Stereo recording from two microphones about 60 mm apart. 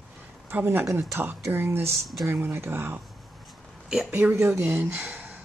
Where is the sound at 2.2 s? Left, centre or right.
Right.